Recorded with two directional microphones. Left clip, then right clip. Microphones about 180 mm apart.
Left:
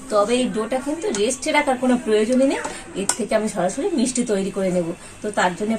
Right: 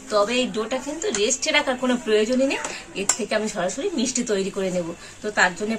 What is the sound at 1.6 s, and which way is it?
Speech, 25° right (ahead or behind).